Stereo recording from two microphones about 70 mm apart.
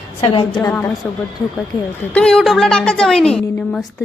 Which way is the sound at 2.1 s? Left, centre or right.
Centre.